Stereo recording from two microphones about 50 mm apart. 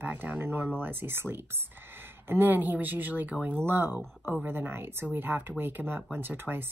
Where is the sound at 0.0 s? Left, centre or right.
Right.